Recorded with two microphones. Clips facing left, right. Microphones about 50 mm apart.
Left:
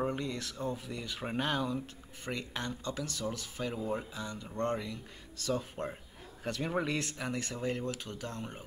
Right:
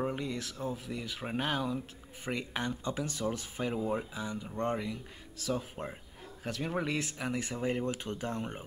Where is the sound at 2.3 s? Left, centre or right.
Centre.